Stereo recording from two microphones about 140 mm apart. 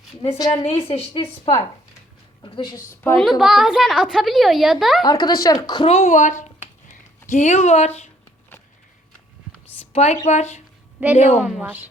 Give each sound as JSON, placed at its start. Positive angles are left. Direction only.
{"t": 0.6, "sound": "a woman's voice", "side_deg": 45}
{"t": 2.4, "sound": "a woman's voice", "side_deg": 35}
{"t": 3.2, "sound": "a woman's voice", "side_deg": 0}
{"t": 5.0, "sound": "speech", "side_deg": 30}
{"t": 5.8, "sound": "a woman's voice", "side_deg": 50}
{"t": 6.8, "sound": "a sound", "side_deg": 60}
{"t": 9.9, "sound": "a woman's voice", "side_deg": 50}
{"t": 11.6, "sound": "a woman's voice", "side_deg": -10}